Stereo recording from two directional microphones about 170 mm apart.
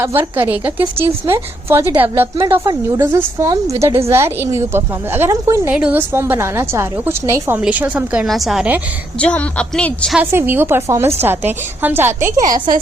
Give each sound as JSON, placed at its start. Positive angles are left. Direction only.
{"t": 0.0, "sound": "a woman's voice", "side_deg": -10}
{"t": 9.1, "sound": "a woman's voice", "side_deg": 5}
{"t": 10.2, "sound": "a woman's voice", "side_deg": -10}